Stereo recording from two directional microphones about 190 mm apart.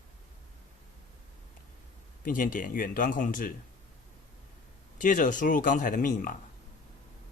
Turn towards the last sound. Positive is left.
turn(degrees=45)  # may be behind; listen again after turning